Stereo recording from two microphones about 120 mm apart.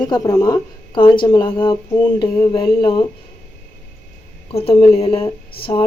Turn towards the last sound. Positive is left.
turn(degrees=50)  # may be behind; listen again after turning